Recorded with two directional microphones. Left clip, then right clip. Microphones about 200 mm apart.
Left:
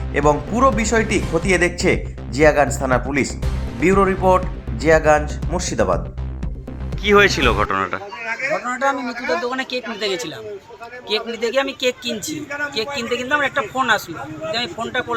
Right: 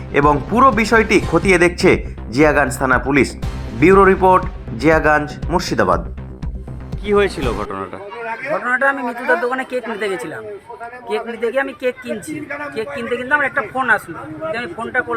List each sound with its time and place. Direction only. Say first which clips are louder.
0.1 s speech: right 3 dB; 10° right (ahead or behind)
7.0 s speech: left 3 dB; centre (ahead or behind)
8.6 s a man's voice: right 4 dB; 25° right (ahead or behind)
9.5 s speech: right 3 dB; centre (ahead or behind)
11.3 s speech: right 1 dB; centre (ahead or behind)
12.0 s a man's voice: even; 30° right (ahead or behind)
13.1 s speech: right 4 dB; 5° right (ahead or behind)